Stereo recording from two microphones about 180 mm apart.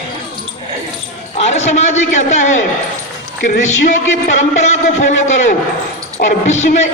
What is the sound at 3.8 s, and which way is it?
Speech, 40° left (ahead or behind).